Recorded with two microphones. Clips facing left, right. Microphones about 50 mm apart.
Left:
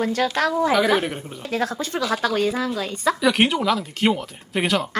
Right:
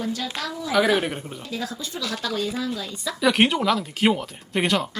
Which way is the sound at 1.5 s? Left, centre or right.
Left.